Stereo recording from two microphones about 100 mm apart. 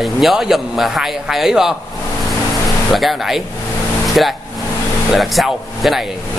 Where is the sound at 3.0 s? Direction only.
Centre (ahead or behind).